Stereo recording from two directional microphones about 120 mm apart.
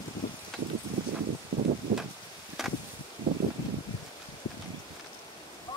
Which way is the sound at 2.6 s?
5° right (ahead or behind).